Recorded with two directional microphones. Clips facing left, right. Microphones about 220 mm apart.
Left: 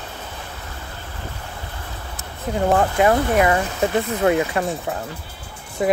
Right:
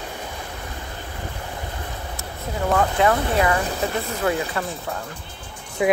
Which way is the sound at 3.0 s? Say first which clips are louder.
Left 4 dB; 20° left (ahead or behind).